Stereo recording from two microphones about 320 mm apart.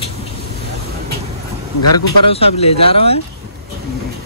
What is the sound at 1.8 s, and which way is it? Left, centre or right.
Speech, left.